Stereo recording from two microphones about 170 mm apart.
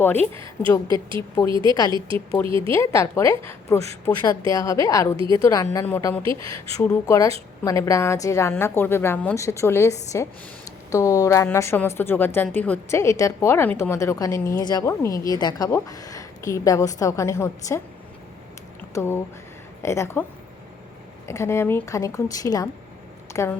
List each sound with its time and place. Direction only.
0.0 s a woman's voice: 10° left (ahead or behind)
0.9 s speech: 25° right (ahead or behind)
2.7 s a woman's voice: 15° left (ahead or behind)
6.2 s speech: 30° right (ahead or behind)
7.0 s a woman's voice: 20° left (ahead or behind)
18.9 s a woman's voice: 15° left (ahead or behind)
21.2 s a woman's voice: 15° left (ahead or behind)